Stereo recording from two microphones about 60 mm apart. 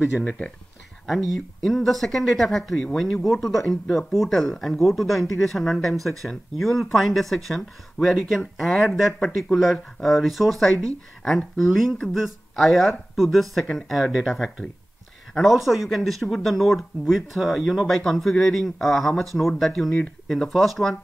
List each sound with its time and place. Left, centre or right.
1.0 s speech: centre